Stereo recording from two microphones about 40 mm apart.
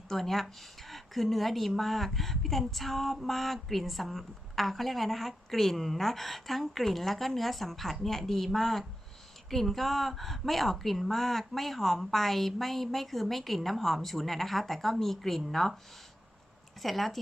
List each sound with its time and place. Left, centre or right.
0.1 s a woman's voice: centre
16.8 s a woman's voice: centre